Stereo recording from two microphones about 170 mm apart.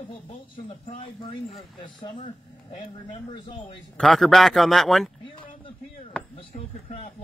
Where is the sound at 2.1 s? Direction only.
40° left (ahead or behind).